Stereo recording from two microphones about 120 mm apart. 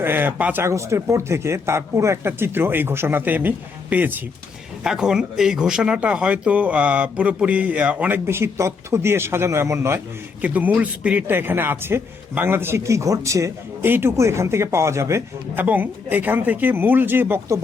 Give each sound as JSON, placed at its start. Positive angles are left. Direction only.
{"t": 0.0, "sound": "a man's voice", "side_deg": -15}